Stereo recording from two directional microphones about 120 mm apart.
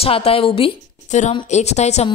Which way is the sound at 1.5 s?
70° left (ahead or behind).